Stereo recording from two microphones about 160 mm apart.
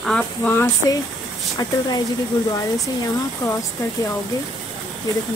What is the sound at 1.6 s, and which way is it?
Speech, 25° left (ahead or behind).